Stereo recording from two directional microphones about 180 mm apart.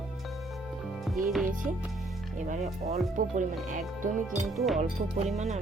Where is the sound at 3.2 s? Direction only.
45° right (ahead or behind).